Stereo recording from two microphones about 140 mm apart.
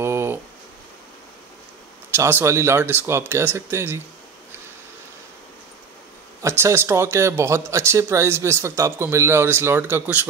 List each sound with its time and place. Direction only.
0.0 s a sound: 20° right (ahead or behind)
2.1 s speech: 15° right (ahead or behind)
6.4 s speech: 15° right (ahead or behind)